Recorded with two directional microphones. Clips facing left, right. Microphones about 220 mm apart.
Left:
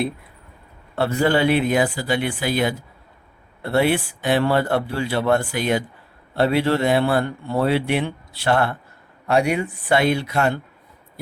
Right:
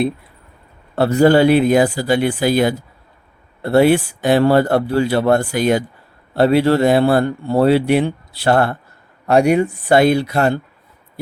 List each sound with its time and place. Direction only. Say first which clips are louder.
0.9 s a man's voice: right 7 dB; 40° right (ahead or behind)